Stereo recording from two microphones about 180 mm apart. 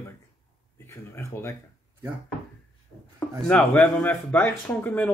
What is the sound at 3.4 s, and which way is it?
Speech, 5° left (ahead or behind).